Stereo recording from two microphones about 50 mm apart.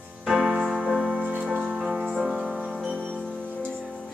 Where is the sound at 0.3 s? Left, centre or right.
Centre.